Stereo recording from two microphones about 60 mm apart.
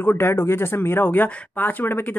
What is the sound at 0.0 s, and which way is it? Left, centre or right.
Speech, left.